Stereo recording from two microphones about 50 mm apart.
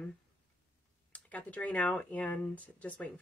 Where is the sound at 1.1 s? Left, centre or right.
Left.